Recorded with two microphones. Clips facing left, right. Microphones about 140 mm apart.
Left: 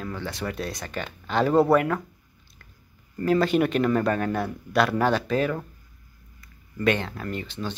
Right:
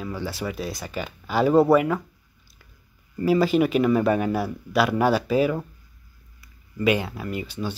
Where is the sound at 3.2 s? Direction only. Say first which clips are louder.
Right 2 dB; 5° right (ahead or behind).